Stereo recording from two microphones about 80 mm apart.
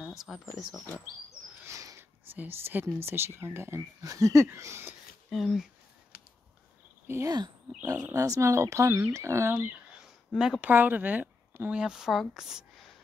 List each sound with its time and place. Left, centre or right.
0.2 s speech: centre
1.6 s a sound: right
2.0 s speech: right
4.0 s speech: right
5.3 s speech: centre
7.2 s speech: right
7.8 s speech: right
9.9 s a sound: centre
10.6 s speech: right
11.7 s speech: centre